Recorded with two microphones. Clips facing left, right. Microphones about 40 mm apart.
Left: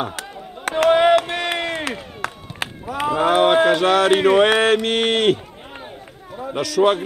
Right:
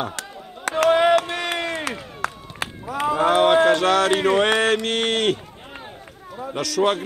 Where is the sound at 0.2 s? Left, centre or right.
Left.